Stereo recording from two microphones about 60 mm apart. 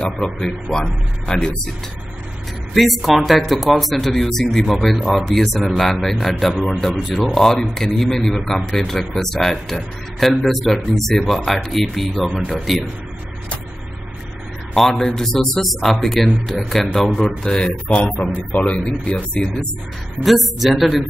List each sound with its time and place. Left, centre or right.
0.0 s a man's voice: centre
2.7 s speech: centre
14.8 s a man's voice: centre
20.2 s speech: centre